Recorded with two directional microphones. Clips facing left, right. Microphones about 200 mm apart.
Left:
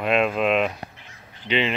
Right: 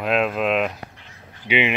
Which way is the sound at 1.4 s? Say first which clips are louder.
Right 2 dB; 15° right (ahead or behind).